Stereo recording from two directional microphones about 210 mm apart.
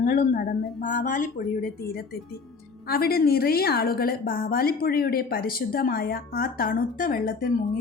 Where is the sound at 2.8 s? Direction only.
45° left (ahead or behind).